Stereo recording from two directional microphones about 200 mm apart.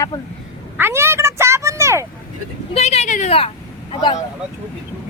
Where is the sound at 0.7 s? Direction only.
10° right (ahead or behind).